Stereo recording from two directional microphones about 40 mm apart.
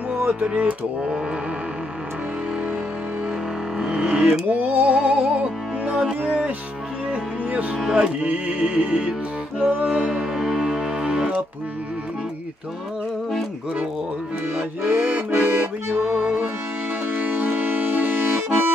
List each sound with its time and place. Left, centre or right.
0.5 s music: right
3.7 s music: centre
7.9 s music: right
9.6 s music: right
9.8 s music: right
10.3 s music: centre
14.9 s accordion: right
16.0 s music: right
17.3 s accordion: right